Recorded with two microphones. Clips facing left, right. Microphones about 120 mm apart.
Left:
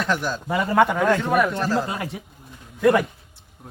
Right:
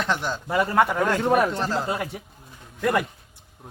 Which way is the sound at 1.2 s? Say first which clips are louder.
Even; 30° right (ahead or behind).